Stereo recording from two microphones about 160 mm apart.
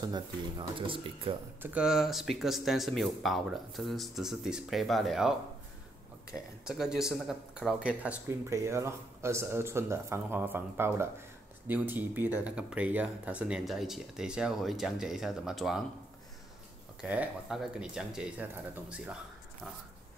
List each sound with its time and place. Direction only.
0.0 s speech: 25° right (ahead or behind)
1.6 s speech: 10° right (ahead or behind)
6.3 s speech: 5° right (ahead or behind)
17.0 s speech: 5° right (ahead or behind)